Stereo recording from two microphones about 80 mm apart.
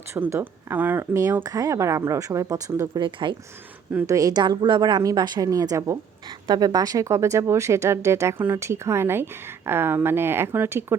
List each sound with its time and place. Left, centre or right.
0.1 s speech: right
1.5 s a woman's voice: right
3.0 s speech: right
4.0 s a woman's voice: right
4.4 s a woman's voice: right
5.5 s speech: right
6.5 s speech: right